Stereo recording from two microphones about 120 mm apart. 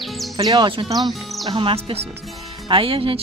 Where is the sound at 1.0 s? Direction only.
Centre (ahead or behind).